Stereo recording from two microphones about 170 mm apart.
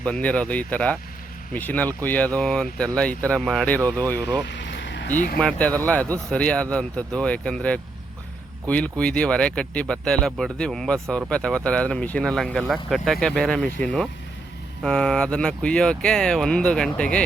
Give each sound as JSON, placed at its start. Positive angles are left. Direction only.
{"t": 0.0, "sound": "speech", "side_deg": 10}
{"t": 4.4, "sound": "vehicle", "side_deg": 90}
{"t": 5.0, "sound": "speech", "side_deg": 50}
{"t": 5.4, "sound": "speech", "side_deg": 5}